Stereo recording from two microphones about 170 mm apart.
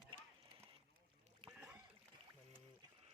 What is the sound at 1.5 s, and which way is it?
Rowboat, 5° right (ahead or behind).